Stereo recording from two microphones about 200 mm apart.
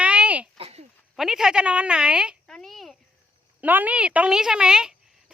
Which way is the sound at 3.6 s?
10° right (ahead or behind).